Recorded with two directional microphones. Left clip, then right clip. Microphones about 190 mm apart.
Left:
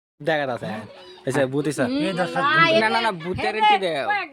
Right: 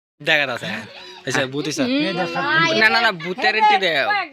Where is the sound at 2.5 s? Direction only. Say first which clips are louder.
Even; 25° right (ahead or behind).